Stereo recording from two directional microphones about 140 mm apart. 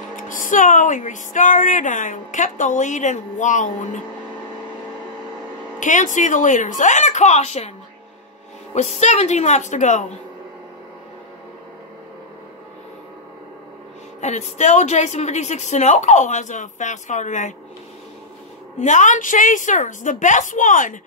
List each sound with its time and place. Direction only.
0.1 s speech: 70° left (ahead or behind)
5.8 s speech: 65° left (ahead or behind)
8.7 s speech: 55° left (ahead or behind)
14.2 s speech: 55° left (ahead or behind)
18.8 s speech: 60° left (ahead or behind)